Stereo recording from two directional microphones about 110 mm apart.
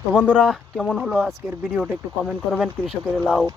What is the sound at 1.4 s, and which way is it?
Speech, 25° right (ahead or behind).